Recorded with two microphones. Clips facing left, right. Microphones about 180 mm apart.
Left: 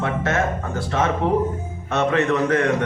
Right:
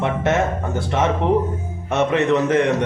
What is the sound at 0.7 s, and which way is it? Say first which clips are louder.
A man's voice: right 2 dB; 20° right (ahead or behind).